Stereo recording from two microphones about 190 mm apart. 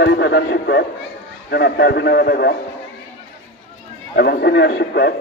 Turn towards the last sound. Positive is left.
turn(degrees=60)  # may be behind; listen again after turning